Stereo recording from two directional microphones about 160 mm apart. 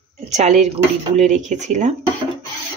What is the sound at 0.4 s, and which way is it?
Speech, 45° right (ahead or behind).